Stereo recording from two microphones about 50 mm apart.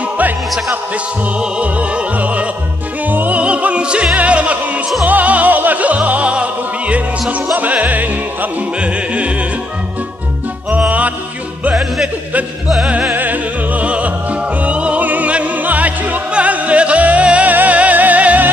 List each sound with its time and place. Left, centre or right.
1.4 s music: right
3.1 s opera: right
5.0 s music: right
10.9 s music: right
12.6 s music: centre
13.1 s music: right
14.6 s opera: right